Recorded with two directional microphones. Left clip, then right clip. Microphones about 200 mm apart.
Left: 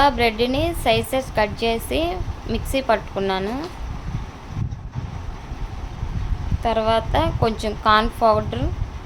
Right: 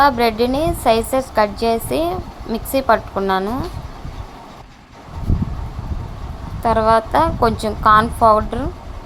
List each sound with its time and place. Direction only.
0.0 s a woman's voice: 15° right (ahead or behind)
6.6 s a woman's voice: 15° right (ahead or behind)